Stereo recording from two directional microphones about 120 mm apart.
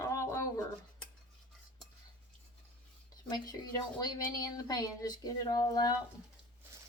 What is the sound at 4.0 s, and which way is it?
A woman's voice, 30° left (ahead or behind).